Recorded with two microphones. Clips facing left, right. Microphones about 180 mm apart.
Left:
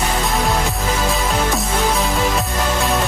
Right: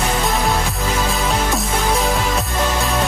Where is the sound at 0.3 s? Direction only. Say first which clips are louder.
Even; centre (ahead or behind).